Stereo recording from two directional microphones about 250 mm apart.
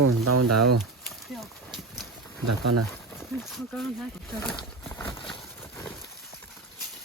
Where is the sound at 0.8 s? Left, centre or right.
Centre.